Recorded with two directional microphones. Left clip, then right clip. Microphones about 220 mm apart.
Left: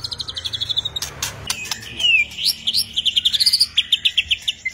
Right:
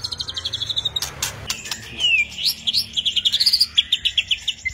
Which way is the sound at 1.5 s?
10° left (ahead or behind).